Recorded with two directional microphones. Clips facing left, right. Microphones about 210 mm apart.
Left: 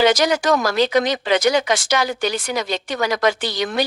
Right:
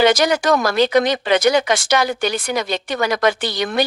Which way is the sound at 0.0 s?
60° right (ahead or behind).